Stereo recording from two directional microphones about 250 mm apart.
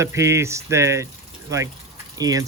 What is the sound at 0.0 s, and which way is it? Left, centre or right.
Speech, centre.